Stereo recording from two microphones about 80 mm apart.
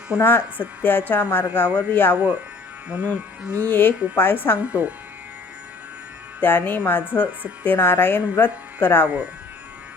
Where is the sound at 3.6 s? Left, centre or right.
Left.